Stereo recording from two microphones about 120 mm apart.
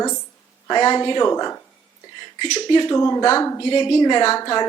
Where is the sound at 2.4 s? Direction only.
40° left (ahead or behind).